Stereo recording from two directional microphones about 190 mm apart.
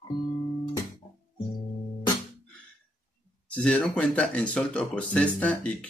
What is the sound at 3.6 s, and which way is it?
Speech, 5° left (ahead or behind).